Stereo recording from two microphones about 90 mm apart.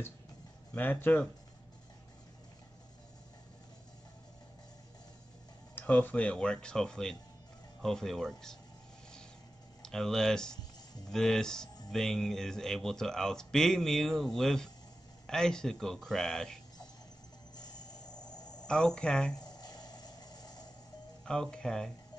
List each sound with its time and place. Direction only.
0.7 s speech: 20° left (ahead or behind)
5.8 s speech: 20° left (ahead or behind)
9.8 s speech: 5° left (ahead or behind)
17.6 s a sound: 45° left (ahead or behind)
18.2 s cricket: 10° left (ahead or behind)
19.3 s a sound: 50° left (ahead or behind)
21.3 s speech: 10° left (ahead or behind)